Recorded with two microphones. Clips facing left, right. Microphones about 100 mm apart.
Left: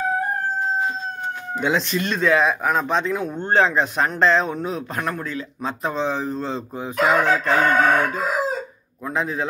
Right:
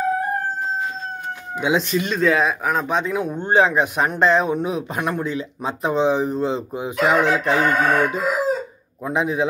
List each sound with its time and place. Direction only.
1.6 s speech: 10° right (ahead or behind)